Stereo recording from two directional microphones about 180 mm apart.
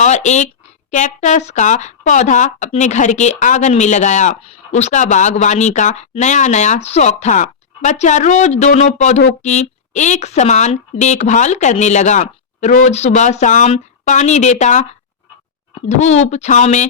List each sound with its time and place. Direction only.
0.0 s a woman's voice: 40° left (ahead or behind)